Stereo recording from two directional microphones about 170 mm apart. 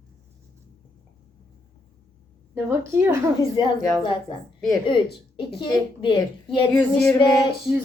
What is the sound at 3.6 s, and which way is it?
Speech, 25° left (ahead or behind).